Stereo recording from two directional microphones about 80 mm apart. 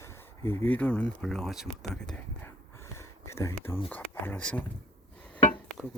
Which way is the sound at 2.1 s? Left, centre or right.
Left.